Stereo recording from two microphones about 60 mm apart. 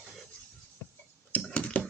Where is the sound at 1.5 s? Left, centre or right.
Centre.